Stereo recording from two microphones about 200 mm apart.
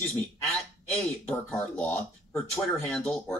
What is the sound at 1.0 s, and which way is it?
Speech, 5° left (ahead or behind).